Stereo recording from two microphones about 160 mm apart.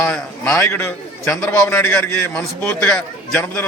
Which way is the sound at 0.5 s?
15° left (ahead or behind).